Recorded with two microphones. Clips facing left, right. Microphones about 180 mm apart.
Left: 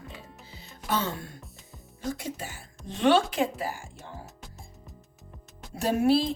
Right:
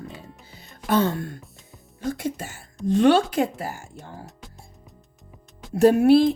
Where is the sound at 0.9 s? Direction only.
55° right (ahead or behind).